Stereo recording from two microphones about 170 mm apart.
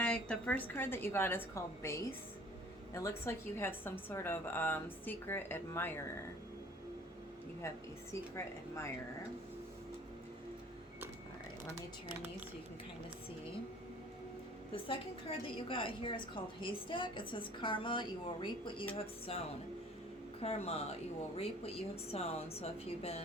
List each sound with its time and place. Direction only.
0.0 s a woman's voice: 5° left (ahead or behind)
14.7 s a woman's voice: 30° left (ahead or behind)